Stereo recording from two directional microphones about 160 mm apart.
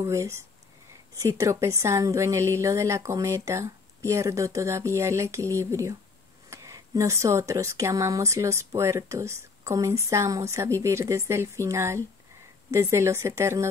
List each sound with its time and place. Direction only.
0.0 s speech: 20° right (ahead or behind)